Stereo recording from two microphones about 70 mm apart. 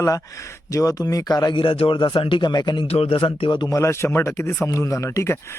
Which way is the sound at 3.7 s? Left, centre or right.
Left.